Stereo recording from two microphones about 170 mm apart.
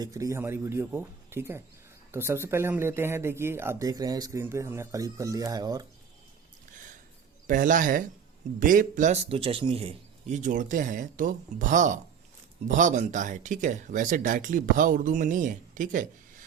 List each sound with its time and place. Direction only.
0.0 s speech: 20° right (ahead or behind)
7.4 s speech: 50° right (ahead or behind)
9.3 s speech: 35° right (ahead or behind); by 16.0 s 50° right (ahead or behind)